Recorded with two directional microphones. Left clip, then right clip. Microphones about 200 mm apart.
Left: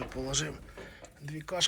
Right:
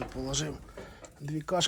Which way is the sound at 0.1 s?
20° right (ahead or behind).